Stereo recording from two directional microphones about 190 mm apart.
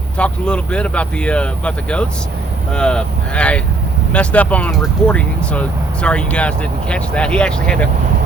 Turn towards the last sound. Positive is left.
turn(degrees=5)  # may be behind; listen again after turning